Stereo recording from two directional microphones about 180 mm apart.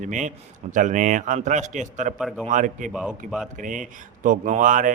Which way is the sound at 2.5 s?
45° right (ahead or behind).